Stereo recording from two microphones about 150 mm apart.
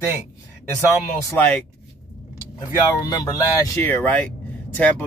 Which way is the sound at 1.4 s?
10° left (ahead or behind).